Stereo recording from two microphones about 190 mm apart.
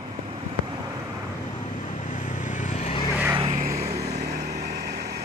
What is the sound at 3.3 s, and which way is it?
Vehicle, 35° right (ahead or behind).